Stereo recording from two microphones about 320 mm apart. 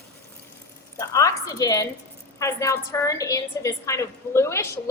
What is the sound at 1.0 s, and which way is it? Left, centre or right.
A woman's voice, centre.